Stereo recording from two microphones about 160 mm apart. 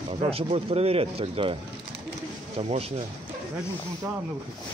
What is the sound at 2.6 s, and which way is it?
Speech, 40° right (ahead or behind).